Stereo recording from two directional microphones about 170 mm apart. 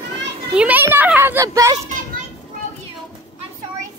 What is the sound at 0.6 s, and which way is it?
A child's voice, 10° right (ahead or behind).